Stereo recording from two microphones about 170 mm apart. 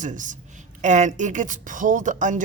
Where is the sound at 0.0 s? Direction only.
50° right (ahead or behind).